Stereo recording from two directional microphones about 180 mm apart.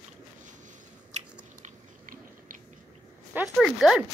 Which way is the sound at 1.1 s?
45° right (ahead or behind).